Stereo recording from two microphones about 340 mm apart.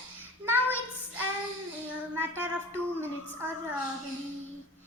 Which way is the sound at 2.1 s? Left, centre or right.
Centre.